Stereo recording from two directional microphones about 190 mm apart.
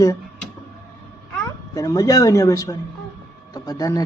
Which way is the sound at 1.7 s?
15° left (ahead or behind).